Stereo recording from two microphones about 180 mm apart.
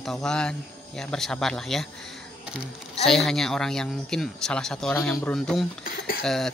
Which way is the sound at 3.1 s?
Centre (ahead or behind).